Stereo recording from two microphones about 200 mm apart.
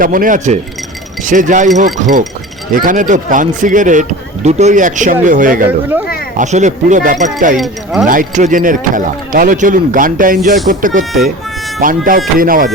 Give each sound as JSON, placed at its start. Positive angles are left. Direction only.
{"t": 0.0, "sound": "speech", "side_deg": -45}
{"t": 7.5, "sound": "speech", "side_deg": 0}
{"t": 8.0, "sound": "speech", "side_deg": -40}